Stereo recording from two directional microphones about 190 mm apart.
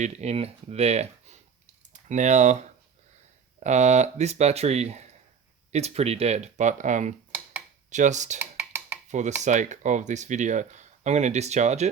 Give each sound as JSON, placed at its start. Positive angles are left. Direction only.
{"t": 0.0, "sound": "speech", "side_deg": -35}
{"t": 8.4, "sound": "a sound", "side_deg": -10}
{"t": 9.0, "sound": "dishes", "side_deg": -40}
{"t": 9.4, "sound": "speech", "side_deg": -40}